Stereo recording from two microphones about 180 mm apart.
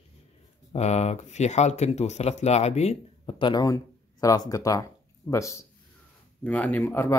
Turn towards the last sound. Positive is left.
turn(degrees=10)  # may be behind; listen again after turning